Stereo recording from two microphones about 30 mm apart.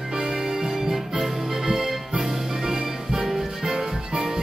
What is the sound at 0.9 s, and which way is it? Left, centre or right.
Music, centre.